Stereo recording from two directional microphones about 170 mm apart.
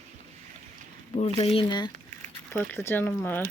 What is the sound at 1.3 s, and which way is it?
Speech, 35° left (ahead or behind).